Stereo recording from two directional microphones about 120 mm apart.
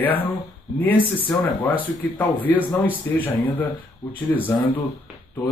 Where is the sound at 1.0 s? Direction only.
45° left (ahead or behind).